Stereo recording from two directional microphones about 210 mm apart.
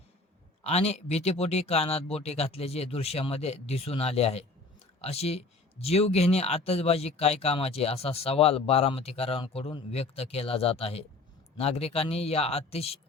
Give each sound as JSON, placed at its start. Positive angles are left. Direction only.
{"t": 0.6, "sound": "speech", "side_deg": 30}